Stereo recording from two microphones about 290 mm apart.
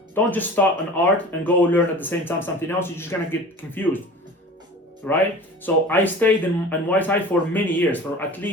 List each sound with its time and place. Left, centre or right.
0.1 s speech: centre
5.0 s speech: centre